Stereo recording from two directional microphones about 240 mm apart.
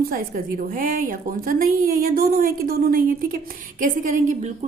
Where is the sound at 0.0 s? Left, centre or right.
Right.